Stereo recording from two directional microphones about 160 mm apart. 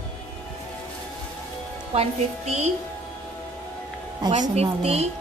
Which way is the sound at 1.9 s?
40° right (ahead or behind).